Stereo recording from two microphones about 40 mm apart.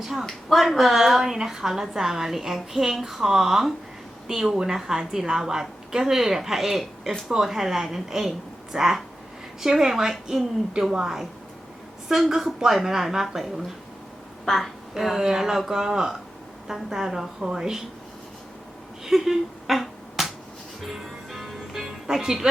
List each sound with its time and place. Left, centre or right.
0.0 s a woman's voice: centre
12.0 s a woman's voice: centre
14.4 s a woman's voice: centre
14.9 s a woman's voice: centre
19.0 s a sound: centre
20.8 s music: centre